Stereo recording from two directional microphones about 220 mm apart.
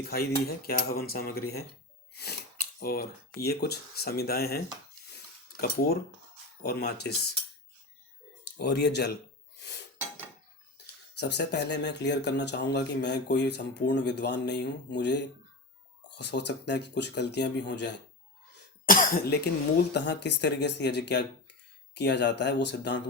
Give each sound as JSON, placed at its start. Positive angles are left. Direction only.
{"t": 0.1, "sound": "speech", "side_deg": 45}
{"t": 2.8, "sound": "speech", "side_deg": 45}
{"t": 8.5, "sound": "speech", "side_deg": 50}
{"t": 11.2, "sound": "speech", "side_deg": 50}
{"t": 18.9, "sound": "speech", "side_deg": 40}